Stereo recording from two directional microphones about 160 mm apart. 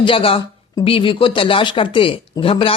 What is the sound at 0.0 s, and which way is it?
Speech, 35° left (ahead or behind).